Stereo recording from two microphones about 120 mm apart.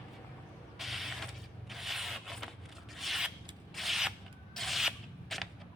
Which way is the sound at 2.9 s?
Centre (ahead or behind).